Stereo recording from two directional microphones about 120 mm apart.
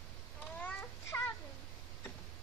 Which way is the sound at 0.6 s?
25° left (ahead or behind).